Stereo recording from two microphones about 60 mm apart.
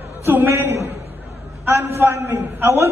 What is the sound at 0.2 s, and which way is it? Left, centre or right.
A man's voice, right.